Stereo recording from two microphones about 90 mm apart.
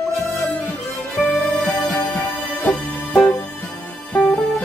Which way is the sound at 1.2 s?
15° left (ahead or behind).